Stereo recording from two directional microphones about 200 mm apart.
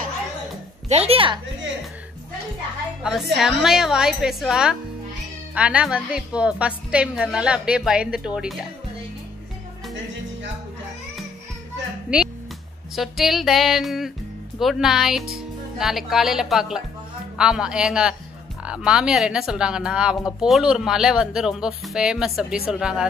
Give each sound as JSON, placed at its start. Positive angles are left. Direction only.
{"t": 0.8, "sound": "a woman's voice", "side_deg": -30}
{"t": 3.0, "sound": "a woman's voice", "side_deg": 0}
{"t": 12.1, "sound": "a woman's voice", "side_deg": -5}